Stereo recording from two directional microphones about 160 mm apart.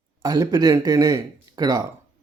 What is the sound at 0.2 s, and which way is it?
Speech, 25° right (ahead or behind).